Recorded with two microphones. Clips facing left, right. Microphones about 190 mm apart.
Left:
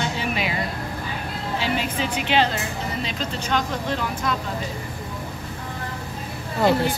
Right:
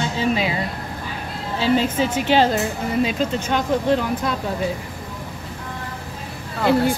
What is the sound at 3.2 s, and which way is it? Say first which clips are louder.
Speech: right 4 dB; 50° right (ahead or behind).